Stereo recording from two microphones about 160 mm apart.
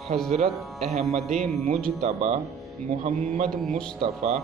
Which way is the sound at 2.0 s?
45° right (ahead or behind).